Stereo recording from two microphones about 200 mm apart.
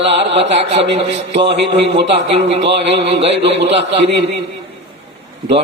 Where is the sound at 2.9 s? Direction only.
30° right (ahead or behind).